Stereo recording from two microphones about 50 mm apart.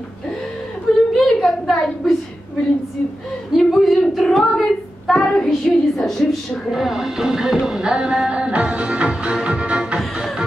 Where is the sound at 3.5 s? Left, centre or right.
Centre.